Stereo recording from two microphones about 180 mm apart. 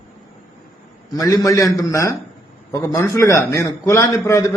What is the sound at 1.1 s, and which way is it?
A man's voice, 20° left (ahead or behind).